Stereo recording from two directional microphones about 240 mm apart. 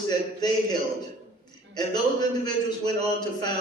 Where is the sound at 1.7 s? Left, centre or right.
Centre.